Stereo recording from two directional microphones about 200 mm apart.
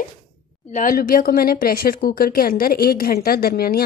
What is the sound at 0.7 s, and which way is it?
A woman's voice, 45° left (ahead or behind).